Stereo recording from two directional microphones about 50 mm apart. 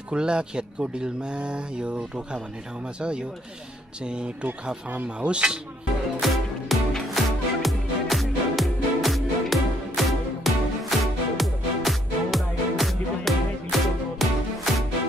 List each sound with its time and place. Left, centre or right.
0.1 s speech: centre
4.9 s speech: right
5.3 s speech: centre
6.1 s music: centre